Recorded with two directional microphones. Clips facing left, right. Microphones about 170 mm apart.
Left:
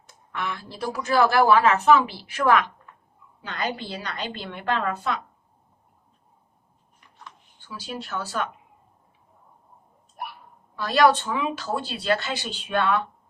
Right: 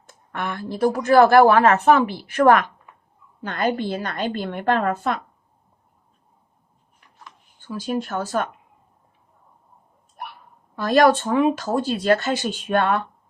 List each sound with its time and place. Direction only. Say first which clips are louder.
0.1 s a woman's voice: right 3 dB; 50° right (ahead or behind)
7.6 s a woman's voice: right 9 dB; 50° right (ahead or behind)
10.8 s a woman's voice: right 3 dB; 50° right (ahead or behind)